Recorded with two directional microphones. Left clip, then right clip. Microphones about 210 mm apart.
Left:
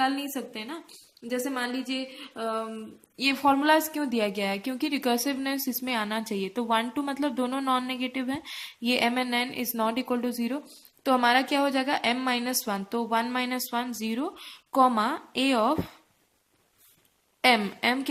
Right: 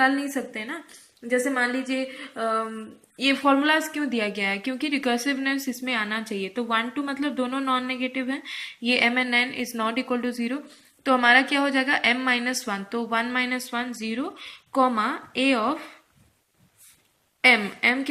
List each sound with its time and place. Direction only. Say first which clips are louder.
0.0 s a woman's voice: right 5 dB; 25° left (ahead or behind)
3.2 s a woman's voice: right 2 dB; 40° left (ahead or behind)
17.5 s speech: right 3 dB; 50° left (ahead or behind)